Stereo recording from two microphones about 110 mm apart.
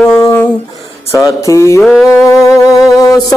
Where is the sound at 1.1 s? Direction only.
30° left (ahead or behind).